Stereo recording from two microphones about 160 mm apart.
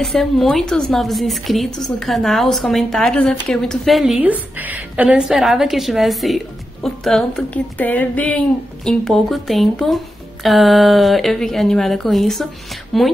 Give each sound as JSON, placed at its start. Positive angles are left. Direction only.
{"t": 0.0, "sound": "a woman's voice", "side_deg": 0}